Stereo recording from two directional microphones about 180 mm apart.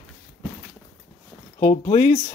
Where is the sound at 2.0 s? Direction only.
30° left (ahead or behind).